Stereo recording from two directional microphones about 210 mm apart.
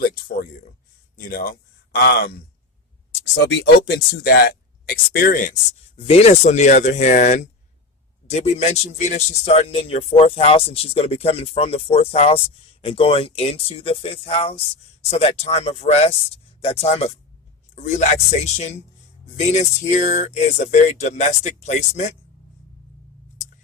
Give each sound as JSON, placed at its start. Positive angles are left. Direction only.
{"t": 1.1, "sound": "speech", "side_deg": 45}
{"t": 3.3, "sound": "speech", "side_deg": 60}
{"t": 6.0, "sound": "speech", "side_deg": 30}